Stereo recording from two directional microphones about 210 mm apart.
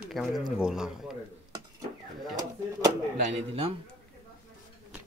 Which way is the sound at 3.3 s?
30° right (ahead or behind).